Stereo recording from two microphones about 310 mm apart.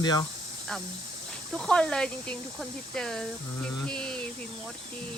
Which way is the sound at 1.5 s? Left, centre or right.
Centre.